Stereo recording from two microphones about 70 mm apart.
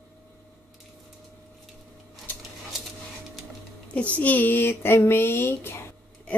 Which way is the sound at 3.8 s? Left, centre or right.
Centre.